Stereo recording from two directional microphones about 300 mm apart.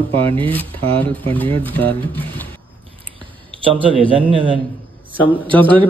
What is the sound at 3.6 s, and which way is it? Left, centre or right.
Speech, centre.